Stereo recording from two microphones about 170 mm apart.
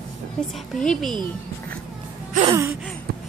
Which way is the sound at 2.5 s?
15° right (ahead or behind).